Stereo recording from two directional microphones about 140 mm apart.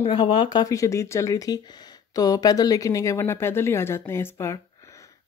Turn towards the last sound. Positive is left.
turn(degrees=20)  # may be behind; listen again after turning